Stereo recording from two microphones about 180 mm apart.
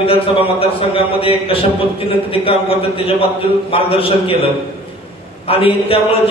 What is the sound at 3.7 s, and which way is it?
Speech, 30° left (ahead or behind).